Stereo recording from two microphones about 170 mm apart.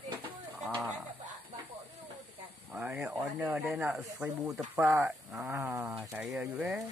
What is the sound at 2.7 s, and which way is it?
Speech, 5° right (ahead or behind).